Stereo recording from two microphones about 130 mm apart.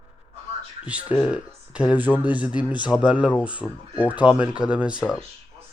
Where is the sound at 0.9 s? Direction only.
10° right (ahead or behind).